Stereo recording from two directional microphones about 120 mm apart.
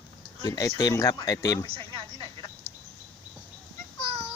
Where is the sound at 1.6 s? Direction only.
50° right (ahead or behind).